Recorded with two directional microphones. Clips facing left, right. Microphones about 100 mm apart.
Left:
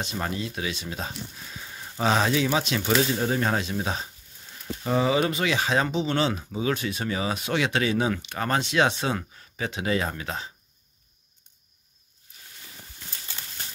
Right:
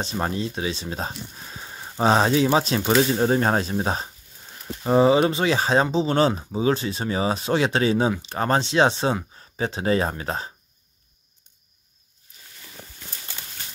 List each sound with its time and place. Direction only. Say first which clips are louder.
0.0 s speech: right 4 dB; 35° right (ahead or behind)